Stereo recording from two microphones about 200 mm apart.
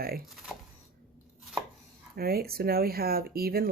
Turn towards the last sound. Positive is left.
turn(degrees=-50)  # may be behind; listen again after turning